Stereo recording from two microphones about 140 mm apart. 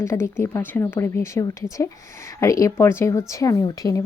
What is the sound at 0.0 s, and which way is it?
A woman's voice, 20° left (ahead or behind).